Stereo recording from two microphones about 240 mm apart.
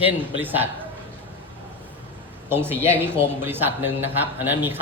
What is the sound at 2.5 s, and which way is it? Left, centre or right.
A man's voice, centre.